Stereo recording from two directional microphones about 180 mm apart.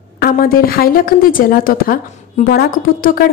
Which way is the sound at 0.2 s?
55° left (ahead or behind).